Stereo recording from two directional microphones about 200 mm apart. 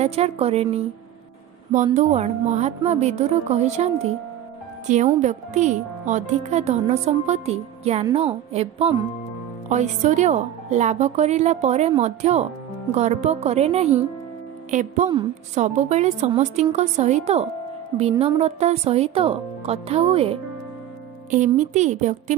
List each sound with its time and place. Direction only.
0.0 s speech: 30° right (ahead or behind)
2.0 s speech: 35° right (ahead or behind)